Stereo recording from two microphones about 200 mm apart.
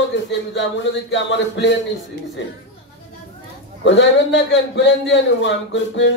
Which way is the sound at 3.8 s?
65° left (ahead or behind).